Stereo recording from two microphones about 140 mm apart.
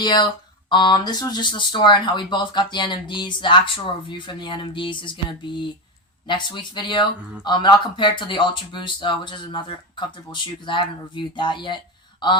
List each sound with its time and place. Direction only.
0.0 s speech: 30° left (ahead or behind)